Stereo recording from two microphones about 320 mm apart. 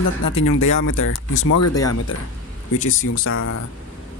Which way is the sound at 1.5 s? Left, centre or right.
Left.